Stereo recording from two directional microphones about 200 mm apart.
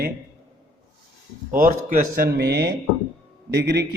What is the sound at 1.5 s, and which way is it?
A man's voice, 45° right (ahead or behind).